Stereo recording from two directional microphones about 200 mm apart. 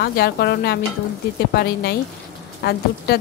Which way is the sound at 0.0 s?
55° left (ahead or behind).